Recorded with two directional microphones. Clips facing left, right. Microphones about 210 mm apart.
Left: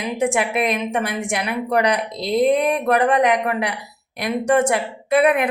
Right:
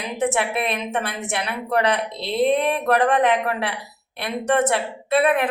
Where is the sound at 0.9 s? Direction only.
15° left (ahead or behind).